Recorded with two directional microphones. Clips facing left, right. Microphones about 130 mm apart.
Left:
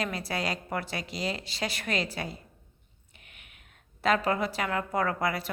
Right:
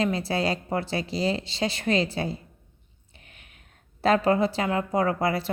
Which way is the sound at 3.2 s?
35° right (ahead or behind).